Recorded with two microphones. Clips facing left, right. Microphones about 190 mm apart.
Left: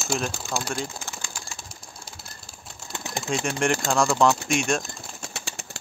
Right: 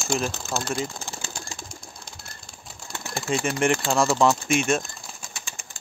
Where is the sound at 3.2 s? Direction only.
Centre (ahead or behind).